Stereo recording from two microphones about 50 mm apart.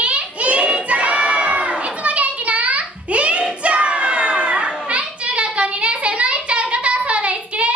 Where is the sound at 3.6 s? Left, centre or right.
Right.